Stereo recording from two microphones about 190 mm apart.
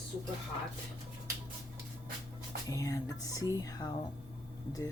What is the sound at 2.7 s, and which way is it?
Speech, 15° left (ahead or behind).